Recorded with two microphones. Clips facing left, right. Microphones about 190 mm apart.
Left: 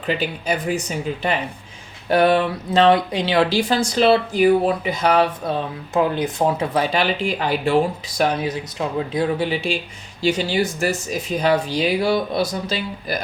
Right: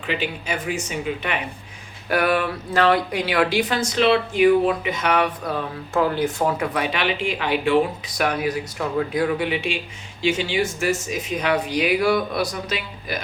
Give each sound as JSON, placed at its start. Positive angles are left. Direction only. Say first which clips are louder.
{"t": 0.0, "sound": "speech", "louder": "left 3 dB", "side_deg": 40}